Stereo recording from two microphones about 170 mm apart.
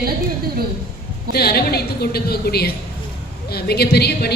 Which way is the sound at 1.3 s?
65° left (ahead or behind).